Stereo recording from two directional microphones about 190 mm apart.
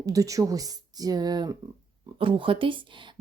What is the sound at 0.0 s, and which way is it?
Speech, 15° right (ahead or behind).